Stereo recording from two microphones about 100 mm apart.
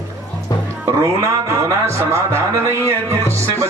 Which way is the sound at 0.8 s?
30° right (ahead or behind).